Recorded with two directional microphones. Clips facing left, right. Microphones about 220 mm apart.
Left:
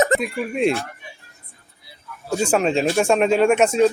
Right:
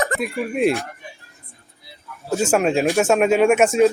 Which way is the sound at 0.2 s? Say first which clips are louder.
Right 1 dB; centre (ahead or behind).